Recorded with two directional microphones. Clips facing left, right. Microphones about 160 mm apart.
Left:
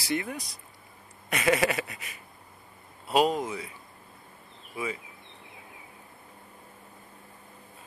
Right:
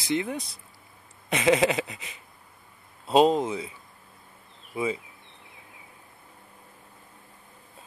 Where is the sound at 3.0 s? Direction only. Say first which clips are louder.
Right 5 dB; 25° right (ahead or behind).